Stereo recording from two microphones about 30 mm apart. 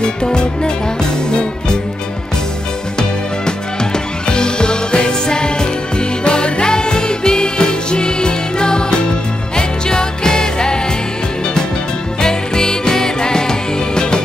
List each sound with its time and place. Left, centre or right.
0.0 s music: left
3.0 s music: left
12.2 s music: left